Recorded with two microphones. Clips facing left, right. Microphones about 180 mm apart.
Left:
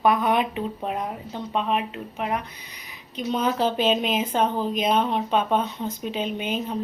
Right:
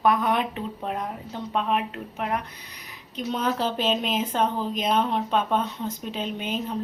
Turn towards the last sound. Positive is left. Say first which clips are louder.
# left 2 dB
turn(degrees=5)  # may be behind; listen again after turning